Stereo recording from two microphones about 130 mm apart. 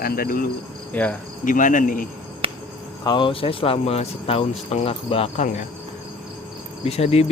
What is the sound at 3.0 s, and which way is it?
Speech, 35° left (ahead or behind).